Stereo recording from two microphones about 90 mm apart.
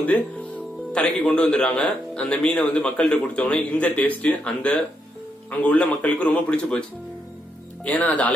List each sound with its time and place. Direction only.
0.0 s speech: 15° left (ahead or behind)
7.8 s speech: 15° left (ahead or behind)